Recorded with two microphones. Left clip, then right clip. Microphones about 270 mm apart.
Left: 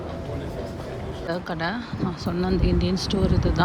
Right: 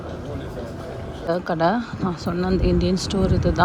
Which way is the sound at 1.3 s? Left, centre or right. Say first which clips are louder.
Right 8 dB; centre.